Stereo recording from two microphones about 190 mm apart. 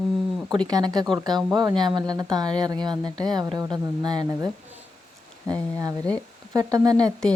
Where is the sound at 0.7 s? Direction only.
20° right (ahead or behind).